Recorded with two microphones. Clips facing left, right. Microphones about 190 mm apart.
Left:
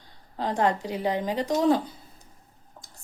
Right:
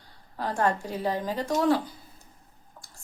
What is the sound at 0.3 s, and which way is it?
A woman's voice, 20° left (ahead or behind).